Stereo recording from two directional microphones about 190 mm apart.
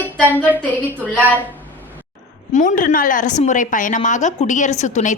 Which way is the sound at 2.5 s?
45° left (ahead or behind).